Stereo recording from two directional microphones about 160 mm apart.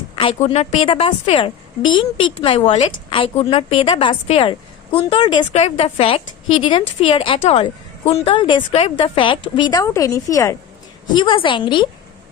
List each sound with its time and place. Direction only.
0.2 s a woman's voice: 35° left (ahead or behind)
5.5 s a woman's voice: 40° left (ahead or behind); by 10.6 s 20° left (ahead or behind)
11.1 s a woman's voice: 30° left (ahead or behind)